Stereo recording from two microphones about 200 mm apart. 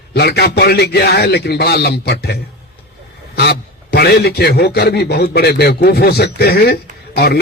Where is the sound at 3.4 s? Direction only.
55° left (ahead or behind).